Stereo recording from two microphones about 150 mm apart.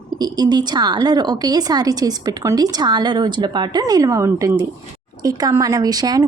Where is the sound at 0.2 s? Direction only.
25° right (ahead or behind).